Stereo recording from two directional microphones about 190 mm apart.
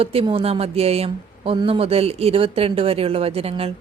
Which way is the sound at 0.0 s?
30° right (ahead or behind).